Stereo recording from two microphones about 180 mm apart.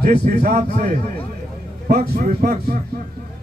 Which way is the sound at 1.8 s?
55° right (ahead or behind).